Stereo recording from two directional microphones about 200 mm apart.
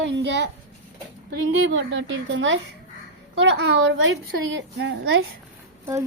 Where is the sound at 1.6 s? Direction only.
65° right (ahead or behind).